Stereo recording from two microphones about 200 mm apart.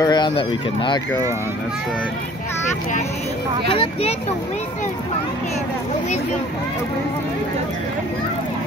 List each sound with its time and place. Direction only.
0.0 s speech: 20° left (ahead or behind)
3.7 s speech: 25° left (ahead or behind)